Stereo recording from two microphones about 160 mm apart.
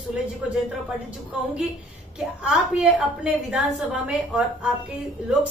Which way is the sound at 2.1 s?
5° right (ahead or behind).